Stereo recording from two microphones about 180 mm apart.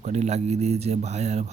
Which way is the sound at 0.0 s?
40° right (ahead or behind).